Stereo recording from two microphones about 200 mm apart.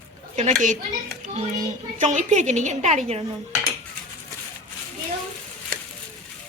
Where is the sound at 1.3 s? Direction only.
35° right (ahead or behind).